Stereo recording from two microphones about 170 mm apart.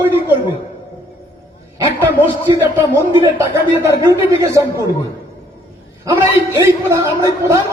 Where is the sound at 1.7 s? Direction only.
15° right (ahead or behind).